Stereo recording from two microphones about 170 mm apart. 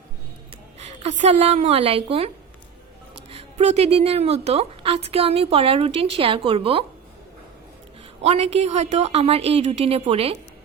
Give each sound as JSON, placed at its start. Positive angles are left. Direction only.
{"t": 0.8, "sound": "a woman's voice", "side_deg": -40}
{"t": 8.2, "sound": "a woman's voice", "side_deg": -40}